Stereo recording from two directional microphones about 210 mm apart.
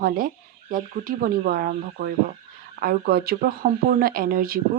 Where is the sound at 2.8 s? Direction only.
45° right (ahead or behind).